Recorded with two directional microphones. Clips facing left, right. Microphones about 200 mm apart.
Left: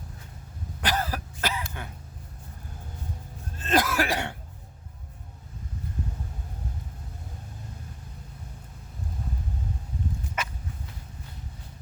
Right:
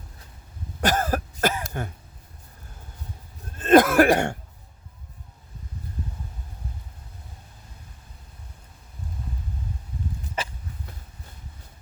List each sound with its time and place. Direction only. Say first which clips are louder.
0.8 s throat clearing: right 6 dB; 45° right (ahead or behind)
3.6 s cough: right 10 dB; 55° right (ahead or behind)
10.4 s hiccup: right 3 dB; 30° right (ahead or behind)